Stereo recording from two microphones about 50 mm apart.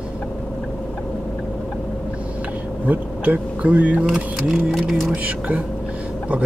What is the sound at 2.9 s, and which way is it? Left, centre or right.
Speech, right.